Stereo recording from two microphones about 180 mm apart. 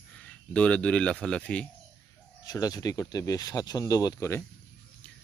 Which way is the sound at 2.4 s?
20° left (ahead or behind).